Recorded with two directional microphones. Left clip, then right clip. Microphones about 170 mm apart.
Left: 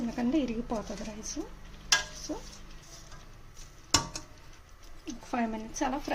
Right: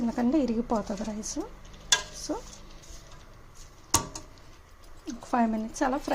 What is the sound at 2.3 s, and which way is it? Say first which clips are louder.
Speech: right 8 dB; 25° right (ahead or behind).